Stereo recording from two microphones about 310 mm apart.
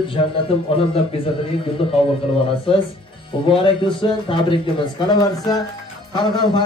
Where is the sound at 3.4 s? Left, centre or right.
Centre.